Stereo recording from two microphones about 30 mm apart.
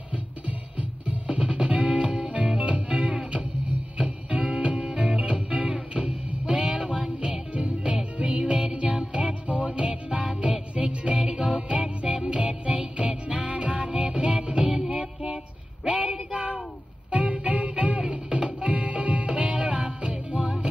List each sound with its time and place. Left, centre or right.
0.5 s music: right
1.3 s music: right
16.0 s child singing: right
17.1 s music: right